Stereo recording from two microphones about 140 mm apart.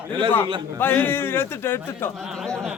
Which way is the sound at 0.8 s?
15° left (ahead or behind).